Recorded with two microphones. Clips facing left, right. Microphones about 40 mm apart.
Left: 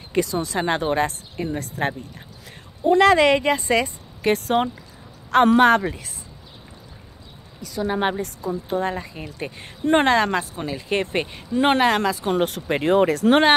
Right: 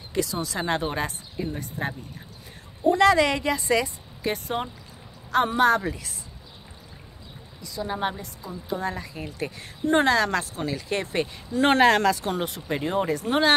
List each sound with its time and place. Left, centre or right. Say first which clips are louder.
0.1 s a woman's voice: left 5 dB; left
2.9 s a woman's voice: left 4 dB; left
5.8 s a woman's voice: left 3 dB; left
7.6 s a woman's voice: left 5 dB; left; by 10.8 s centre
10.9 s a woman's voice: left 6 dB; left
11.6 s speech: even; centre
12.4 s speech: left 7 dB; left